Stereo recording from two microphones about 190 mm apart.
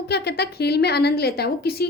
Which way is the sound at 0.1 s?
60° left (ahead or behind).